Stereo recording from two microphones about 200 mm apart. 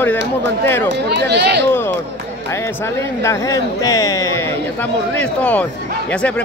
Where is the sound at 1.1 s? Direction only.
55° right (ahead or behind).